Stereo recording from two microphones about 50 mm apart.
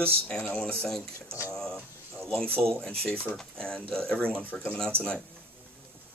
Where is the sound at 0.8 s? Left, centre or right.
Centre.